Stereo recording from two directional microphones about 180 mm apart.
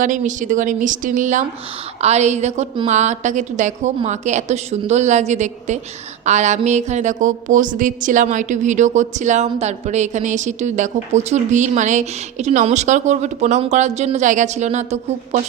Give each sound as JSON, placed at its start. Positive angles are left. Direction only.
{"t": 0.0, "sound": "a woman's voice", "side_deg": -45}